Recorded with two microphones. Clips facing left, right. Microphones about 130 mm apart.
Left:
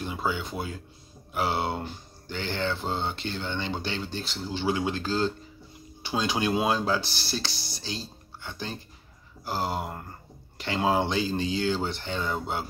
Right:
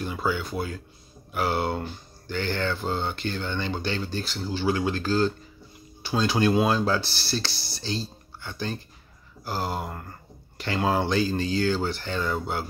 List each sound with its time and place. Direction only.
0.0 s speech: 20° left (ahead or behind)